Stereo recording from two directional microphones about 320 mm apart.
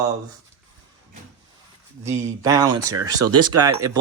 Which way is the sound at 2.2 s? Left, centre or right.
Centre.